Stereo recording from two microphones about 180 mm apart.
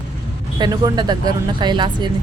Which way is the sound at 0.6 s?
20° right (ahead or behind).